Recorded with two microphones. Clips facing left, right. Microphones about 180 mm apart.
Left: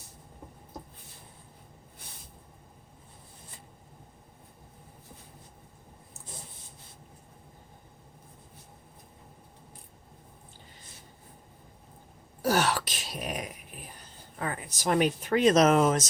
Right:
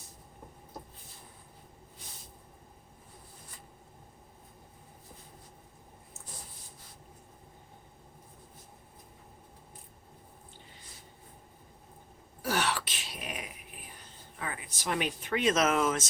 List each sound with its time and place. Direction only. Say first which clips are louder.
12.4 s throat clearing: left 5 dB; 40° left (ahead or behind)
14.3 s speech: left 5 dB; 45° left (ahead or behind)